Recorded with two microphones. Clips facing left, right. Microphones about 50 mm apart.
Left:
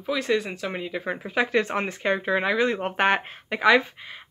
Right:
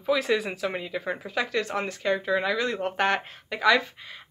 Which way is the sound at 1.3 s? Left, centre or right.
Left.